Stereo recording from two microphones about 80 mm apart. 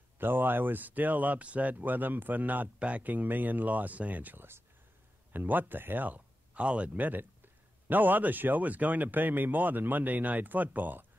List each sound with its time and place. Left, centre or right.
0.2 s speech: right